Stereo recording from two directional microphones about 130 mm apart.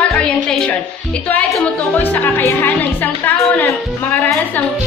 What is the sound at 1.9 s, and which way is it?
Speech, 15° left (ahead or behind).